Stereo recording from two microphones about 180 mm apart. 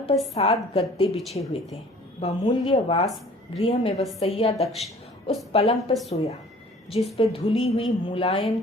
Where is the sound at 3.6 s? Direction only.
30° left (ahead or behind).